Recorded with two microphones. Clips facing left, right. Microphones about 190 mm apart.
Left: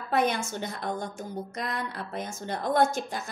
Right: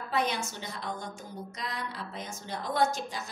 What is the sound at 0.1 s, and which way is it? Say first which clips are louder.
A woman's voice: left 5 dB; 50° left (ahead or behind).